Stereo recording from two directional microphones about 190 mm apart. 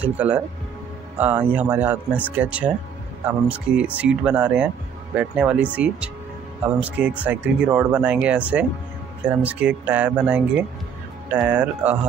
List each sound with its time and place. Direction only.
0.0 s speech: 10° right (ahead or behind)